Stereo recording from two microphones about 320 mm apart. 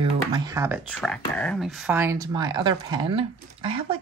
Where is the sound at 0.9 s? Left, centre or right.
Centre.